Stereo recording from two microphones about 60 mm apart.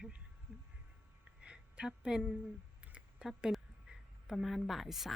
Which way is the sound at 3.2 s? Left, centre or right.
Centre.